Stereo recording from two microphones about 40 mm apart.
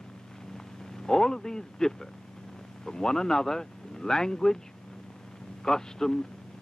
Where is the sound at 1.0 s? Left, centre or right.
Centre.